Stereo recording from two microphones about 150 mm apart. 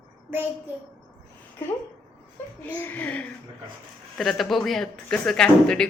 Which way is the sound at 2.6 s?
10° left (ahead or behind).